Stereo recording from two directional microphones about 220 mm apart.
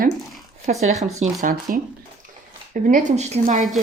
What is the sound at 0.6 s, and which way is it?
Speech, 30° right (ahead or behind).